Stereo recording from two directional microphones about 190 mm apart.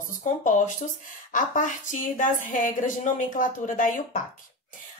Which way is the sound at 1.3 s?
40° left (ahead or behind).